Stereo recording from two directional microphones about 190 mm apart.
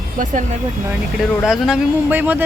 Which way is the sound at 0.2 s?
40° right (ahead or behind).